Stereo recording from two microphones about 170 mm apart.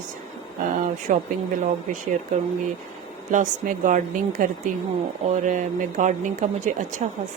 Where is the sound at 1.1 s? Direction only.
45° right (ahead or behind).